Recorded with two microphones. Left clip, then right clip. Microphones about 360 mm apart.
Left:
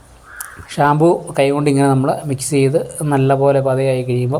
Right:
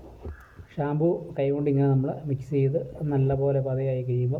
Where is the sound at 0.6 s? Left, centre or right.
Right.